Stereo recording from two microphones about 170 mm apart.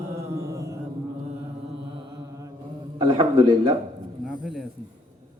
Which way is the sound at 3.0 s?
25° right (ahead or behind).